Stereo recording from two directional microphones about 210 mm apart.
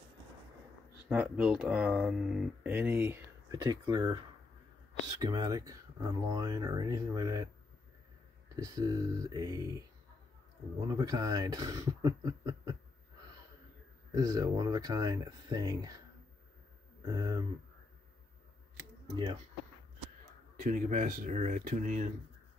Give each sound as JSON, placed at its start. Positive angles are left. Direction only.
{"t": 1.0, "sound": "speech", "side_deg": -5}
{"t": 3.5, "sound": "speech", "side_deg": -20}
{"t": 5.2, "sound": "speech", "side_deg": -20}
{"t": 8.5, "sound": "speech", "side_deg": -15}
{"t": 10.9, "sound": "speech", "side_deg": -15}
{"t": 14.1, "sound": "speech", "side_deg": -15}
{"t": 17.0, "sound": "speech", "side_deg": -15}
{"t": 20.5, "sound": "speech", "side_deg": -40}